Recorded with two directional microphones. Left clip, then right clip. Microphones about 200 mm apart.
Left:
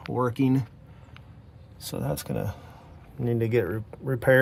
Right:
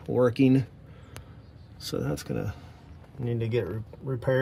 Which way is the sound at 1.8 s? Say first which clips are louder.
Even; 25° left (ahead or behind).